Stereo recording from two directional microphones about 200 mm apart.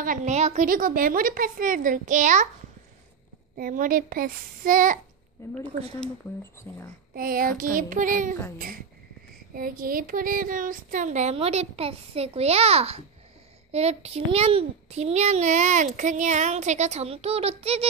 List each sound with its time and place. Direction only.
0.0 s a woman's voice: 40° right (ahead or behind)
3.5 s a woman's voice: 45° right (ahead or behind)
5.4 s speech: 15° left (ahead or behind)
7.2 s a woman's voice: 45° right (ahead or behind)
9.5 s a child's voice: 45° right (ahead or behind)